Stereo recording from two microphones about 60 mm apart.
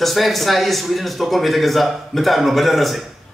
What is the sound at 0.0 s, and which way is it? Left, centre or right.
A man's voice, centre.